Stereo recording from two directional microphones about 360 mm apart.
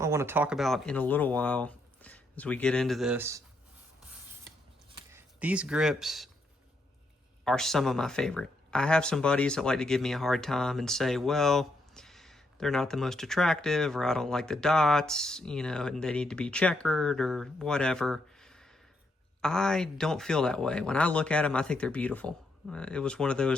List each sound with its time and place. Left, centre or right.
0.0 s speech: centre
4.9 s speech: centre
7.4 s speech: centre